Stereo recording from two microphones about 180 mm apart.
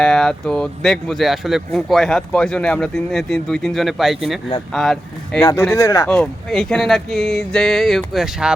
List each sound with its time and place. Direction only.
0.0 s speech: 5° left (ahead or behind)
5.5 s speech: 15° left (ahead or behind)
6.1 s speech: 5° left (ahead or behind)